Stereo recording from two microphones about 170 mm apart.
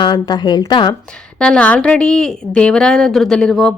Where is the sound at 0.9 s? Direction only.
5° left (ahead or behind).